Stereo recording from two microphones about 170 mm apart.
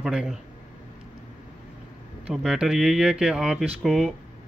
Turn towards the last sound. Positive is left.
turn(degrees=0)  # may be behind; listen again after turning